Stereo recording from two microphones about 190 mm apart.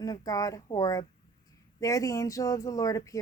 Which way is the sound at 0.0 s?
20° left (ahead or behind).